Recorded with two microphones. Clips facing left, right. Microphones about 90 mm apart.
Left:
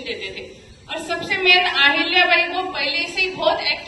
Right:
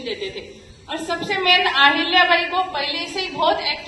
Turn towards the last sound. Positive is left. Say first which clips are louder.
# even
turn(degrees=-35)  # may be behind; listen again after turning